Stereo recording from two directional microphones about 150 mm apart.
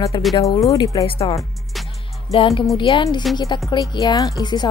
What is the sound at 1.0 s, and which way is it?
Speech, 35° left (ahead or behind).